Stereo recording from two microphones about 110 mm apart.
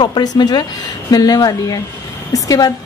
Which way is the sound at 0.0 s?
40° left (ahead or behind).